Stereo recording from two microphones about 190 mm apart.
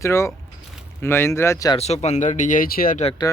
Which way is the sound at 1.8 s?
35° left (ahead or behind).